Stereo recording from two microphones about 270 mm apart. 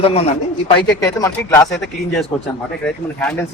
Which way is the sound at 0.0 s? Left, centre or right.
Left.